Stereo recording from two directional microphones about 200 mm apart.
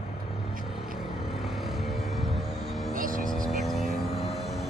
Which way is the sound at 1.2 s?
Centre (ahead or behind).